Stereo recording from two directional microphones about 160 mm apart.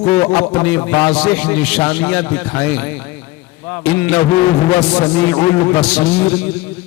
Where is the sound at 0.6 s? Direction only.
5° left (ahead or behind).